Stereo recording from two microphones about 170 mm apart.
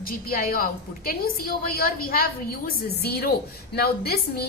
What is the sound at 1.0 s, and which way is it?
A woman's voice, 60° left (ahead or behind).